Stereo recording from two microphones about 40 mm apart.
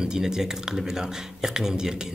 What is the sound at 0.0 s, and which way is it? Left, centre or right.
Speech, centre.